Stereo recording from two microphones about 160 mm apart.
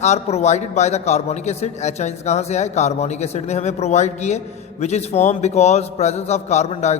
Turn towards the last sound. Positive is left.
turn(degrees=45)  # may be behind; listen again after turning